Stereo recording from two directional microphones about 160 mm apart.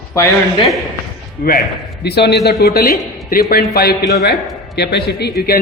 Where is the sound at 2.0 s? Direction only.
90° left.